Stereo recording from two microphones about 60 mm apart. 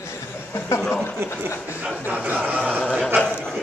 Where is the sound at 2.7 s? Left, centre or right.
Centre.